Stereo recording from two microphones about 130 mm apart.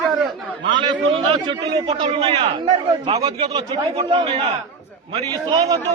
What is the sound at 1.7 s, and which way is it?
A man's voice, 35° right (ahead or behind).